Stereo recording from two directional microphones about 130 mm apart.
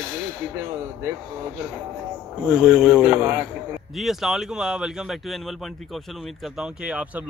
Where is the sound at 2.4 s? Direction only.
5° right (ahead or behind).